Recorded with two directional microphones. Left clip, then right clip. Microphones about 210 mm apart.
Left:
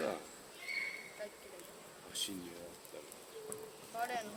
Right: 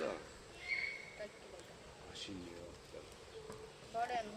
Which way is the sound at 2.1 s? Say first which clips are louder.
Left 8 dB; 55° left (ahead or behind).